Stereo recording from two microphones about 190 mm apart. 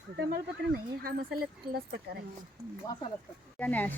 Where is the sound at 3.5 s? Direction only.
10° left (ahead or behind).